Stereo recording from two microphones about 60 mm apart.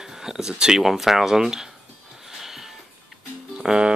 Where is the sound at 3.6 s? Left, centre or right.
Centre.